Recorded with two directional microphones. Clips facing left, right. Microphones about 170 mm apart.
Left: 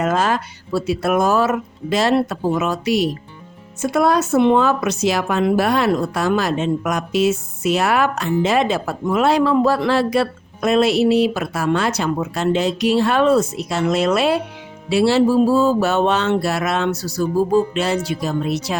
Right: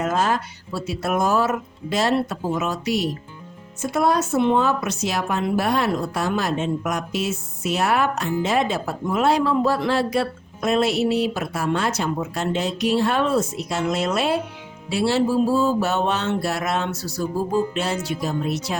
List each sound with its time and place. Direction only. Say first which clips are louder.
0.0 s speech: left 3 dB; 80° left
3.8 s speech: left 4 dB; 90° left